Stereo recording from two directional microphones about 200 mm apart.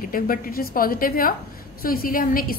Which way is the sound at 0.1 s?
45° left (ahead or behind).